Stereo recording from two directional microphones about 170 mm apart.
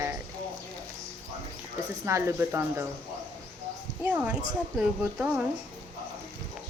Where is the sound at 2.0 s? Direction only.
15° right (ahead or behind).